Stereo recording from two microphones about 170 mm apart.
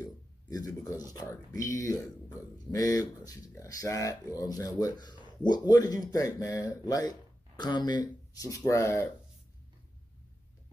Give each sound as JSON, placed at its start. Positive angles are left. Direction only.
{"t": 0.0, "sound": "speech", "side_deg": 20}